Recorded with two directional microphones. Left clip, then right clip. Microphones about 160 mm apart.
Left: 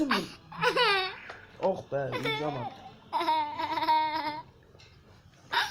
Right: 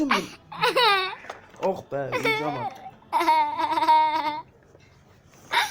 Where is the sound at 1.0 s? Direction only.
40° right (ahead or behind).